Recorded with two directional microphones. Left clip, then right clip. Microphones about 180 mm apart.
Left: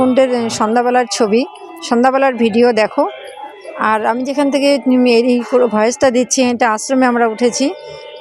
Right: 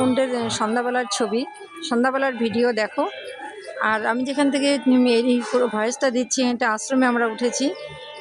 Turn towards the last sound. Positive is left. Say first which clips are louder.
# left 8 dB
turn(degrees=30)  # may be behind; listen again after turning